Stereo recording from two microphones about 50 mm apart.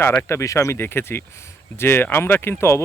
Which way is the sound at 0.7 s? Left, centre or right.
Left.